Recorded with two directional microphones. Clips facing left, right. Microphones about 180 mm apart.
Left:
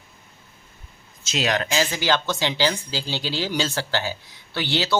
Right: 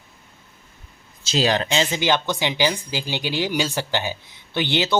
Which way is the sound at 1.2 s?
30° right (ahead or behind).